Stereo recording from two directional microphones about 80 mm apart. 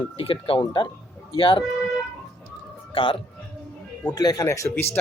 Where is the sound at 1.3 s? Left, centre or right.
Left.